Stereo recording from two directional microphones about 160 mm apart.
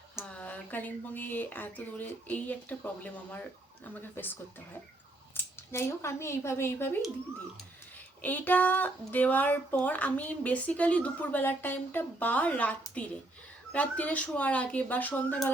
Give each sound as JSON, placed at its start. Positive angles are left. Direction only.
{"t": 0.2, "sound": "speech", "side_deg": 10}
{"t": 8.2, "sound": "speech", "side_deg": 10}
{"t": 13.7, "sound": "speech", "side_deg": 10}